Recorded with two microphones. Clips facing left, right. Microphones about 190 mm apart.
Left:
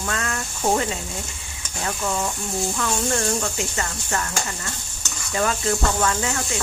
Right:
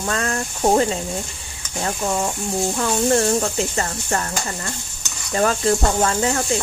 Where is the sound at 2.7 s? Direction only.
35° right (ahead or behind).